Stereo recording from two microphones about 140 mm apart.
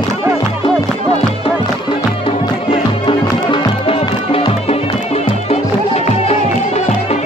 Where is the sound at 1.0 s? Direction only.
40° left (ahead or behind).